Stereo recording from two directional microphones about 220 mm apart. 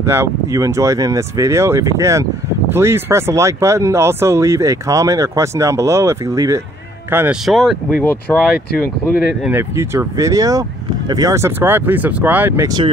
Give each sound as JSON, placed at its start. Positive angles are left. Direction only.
{"t": 0.0, "sound": "speech", "side_deg": -10}
{"t": 8.7, "sound": "speech", "side_deg": 40}
{"t": 9.3, "sound": "speech", "side_deg": -5}